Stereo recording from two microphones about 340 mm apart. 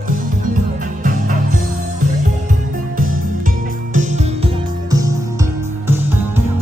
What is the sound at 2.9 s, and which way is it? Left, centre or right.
Music, right.